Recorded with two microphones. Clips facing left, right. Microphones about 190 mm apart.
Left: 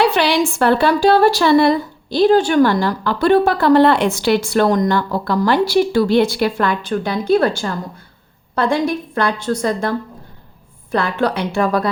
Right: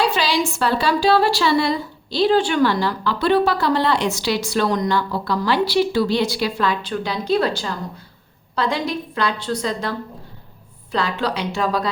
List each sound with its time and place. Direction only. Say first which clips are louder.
0.0 s a woman's voice: left 5 dB; 60° left (ahead or behind)
10.9 s a woman's voice: left 4 dB; 55° left (ahead or behind)